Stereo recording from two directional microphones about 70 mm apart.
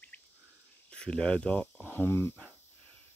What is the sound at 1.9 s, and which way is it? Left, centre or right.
Speech, left.